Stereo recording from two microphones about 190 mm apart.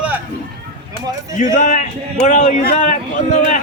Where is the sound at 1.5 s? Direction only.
45° left (ahead or behind).